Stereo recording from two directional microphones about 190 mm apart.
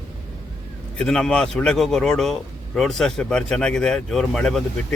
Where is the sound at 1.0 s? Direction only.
5° left (ahead or behind).